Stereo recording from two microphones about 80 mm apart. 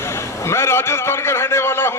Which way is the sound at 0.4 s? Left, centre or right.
Left.